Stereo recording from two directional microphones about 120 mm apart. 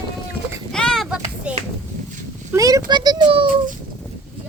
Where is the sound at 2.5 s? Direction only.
30° right (ahead or behind).